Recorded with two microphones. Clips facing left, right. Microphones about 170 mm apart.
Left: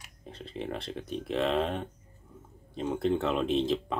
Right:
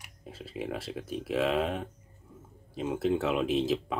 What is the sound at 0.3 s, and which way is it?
Speech, 5° right (ahead or behind).